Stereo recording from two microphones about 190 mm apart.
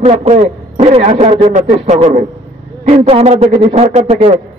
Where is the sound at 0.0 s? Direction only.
35° right (ahead or behind).